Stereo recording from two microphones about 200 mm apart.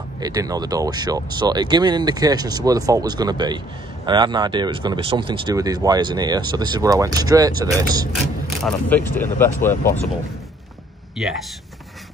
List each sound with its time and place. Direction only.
0.2 s speech: 20° right (ahead or behind)
8.6 s speech: 10° left (ahead or behind)